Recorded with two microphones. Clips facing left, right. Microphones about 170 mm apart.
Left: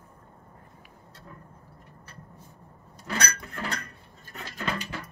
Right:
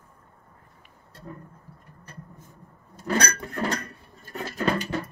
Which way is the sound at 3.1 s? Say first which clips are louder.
Right 6 dB; 45° right (ahead or behind).